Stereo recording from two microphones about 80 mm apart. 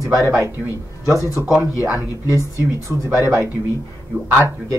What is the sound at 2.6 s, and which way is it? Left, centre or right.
A man's voice, right.